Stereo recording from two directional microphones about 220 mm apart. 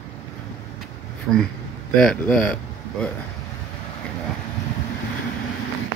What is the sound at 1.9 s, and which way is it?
Speech, 5° left (ahead or behind).